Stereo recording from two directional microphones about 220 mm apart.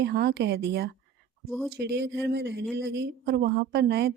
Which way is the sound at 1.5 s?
Centre (ahead or behind).